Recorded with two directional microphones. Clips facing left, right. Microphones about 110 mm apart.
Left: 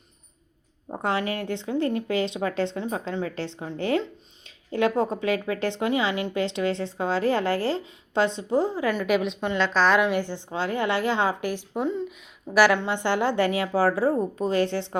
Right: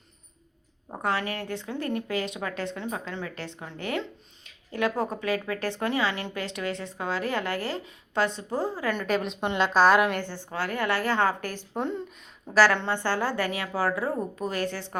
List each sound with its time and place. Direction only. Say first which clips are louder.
1.0 s a woman's voice: left 3 dB; 20° left (ahead or behind); by 10.2 s 5° right (ahead or behind)
10.2 s a woman's voice: left 4 dB; 15° left (ahead or behind)
11.7 s a woman's voice: even; centre (ahead or behind); by 14.8 s 25° left (ahead or behind)